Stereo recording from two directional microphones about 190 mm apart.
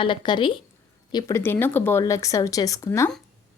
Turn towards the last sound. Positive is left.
turn(degrees=15)  # may be behind; listen again after turning